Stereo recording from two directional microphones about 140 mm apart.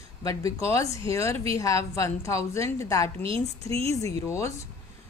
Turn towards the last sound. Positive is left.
turn(degrees=20)  # may be behind; listen again after turning